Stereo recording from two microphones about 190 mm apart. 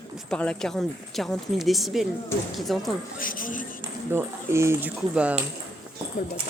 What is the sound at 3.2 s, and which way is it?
Speech, 45° left (ahead or behind).